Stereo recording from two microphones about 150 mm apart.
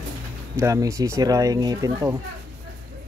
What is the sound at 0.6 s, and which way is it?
Speech, 20° right (ahead or behind).